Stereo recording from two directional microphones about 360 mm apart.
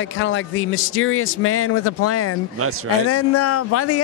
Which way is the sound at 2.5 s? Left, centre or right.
Right.